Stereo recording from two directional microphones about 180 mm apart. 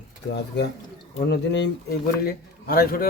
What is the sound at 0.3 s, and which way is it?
A man's voice, 70° left (ahead or behind).